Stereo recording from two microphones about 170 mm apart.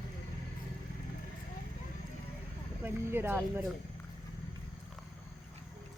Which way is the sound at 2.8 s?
15° right (ahead or behind).